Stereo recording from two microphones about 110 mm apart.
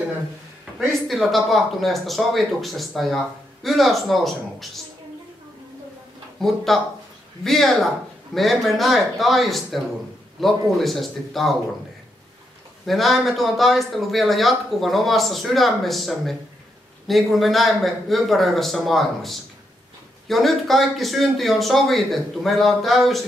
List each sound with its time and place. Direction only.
1.0 s speech: centre (ahead or behind)
6.4 s speech: centre (ahead or behind)
12.8 s speech: centre (ahead or behind)